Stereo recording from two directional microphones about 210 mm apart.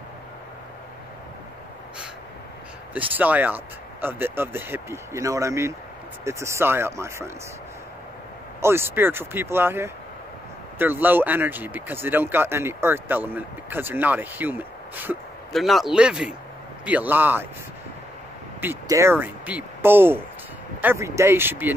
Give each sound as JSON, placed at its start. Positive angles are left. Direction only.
{"t": 2.9, "sound": "speech", "side_deg": -10}
{"t": 8.5, "sound": "speech", "side_deg": -10}
{"t": 18.6, "sound": "speech", "side_deg": -10}